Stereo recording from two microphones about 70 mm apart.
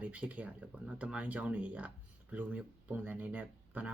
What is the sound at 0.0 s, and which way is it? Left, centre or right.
Speech, centre.